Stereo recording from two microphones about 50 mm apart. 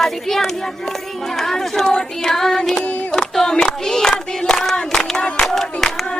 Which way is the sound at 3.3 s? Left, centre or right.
Centre.